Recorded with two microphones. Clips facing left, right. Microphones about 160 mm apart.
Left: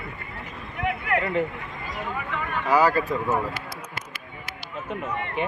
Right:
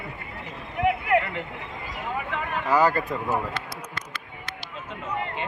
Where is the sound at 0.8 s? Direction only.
15° right (ahead or behind).